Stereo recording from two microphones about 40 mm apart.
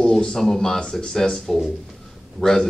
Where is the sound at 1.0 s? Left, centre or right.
Centre.